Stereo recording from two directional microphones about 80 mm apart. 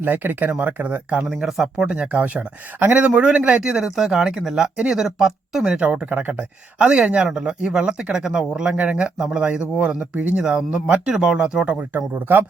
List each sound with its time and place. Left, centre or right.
0.0 s speech: right
1.4 s speech: centre; by 12.5 s right